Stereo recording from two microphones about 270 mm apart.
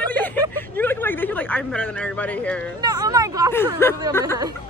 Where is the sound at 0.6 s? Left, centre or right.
Centre.